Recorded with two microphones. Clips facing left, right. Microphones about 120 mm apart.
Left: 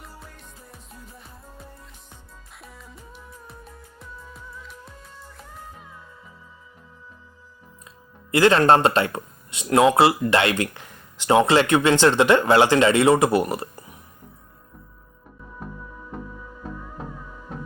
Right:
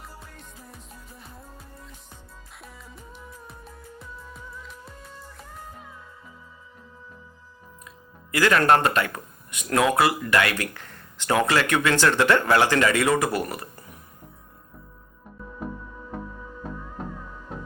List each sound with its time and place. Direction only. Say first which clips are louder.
0.7 s music: left 1 dB; centre (ahead or behind)
7.9 s speech: left 8 dB; 25° left (ahead or behind)